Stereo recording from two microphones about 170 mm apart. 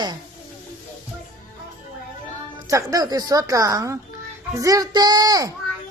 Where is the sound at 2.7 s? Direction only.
20° right (ahead or behind).